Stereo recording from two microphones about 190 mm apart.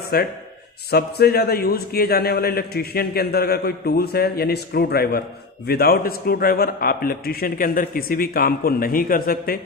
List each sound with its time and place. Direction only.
0.1 s a man's voice: 55° left (ahead or behind)